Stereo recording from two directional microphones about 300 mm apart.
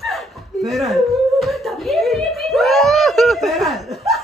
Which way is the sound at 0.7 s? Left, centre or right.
Centre.